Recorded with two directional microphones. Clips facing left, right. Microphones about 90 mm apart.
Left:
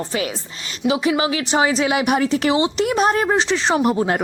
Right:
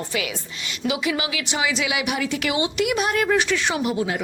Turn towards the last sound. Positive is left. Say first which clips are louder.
# left 6 dB
turn(degrees=45)  # may be behind; listen again after turning